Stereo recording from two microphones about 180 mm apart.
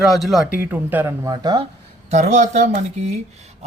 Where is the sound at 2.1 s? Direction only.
40° right (ahead or behind).